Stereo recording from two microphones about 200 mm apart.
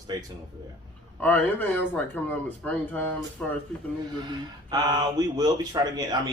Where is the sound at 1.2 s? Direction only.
10° left (ahead or behind).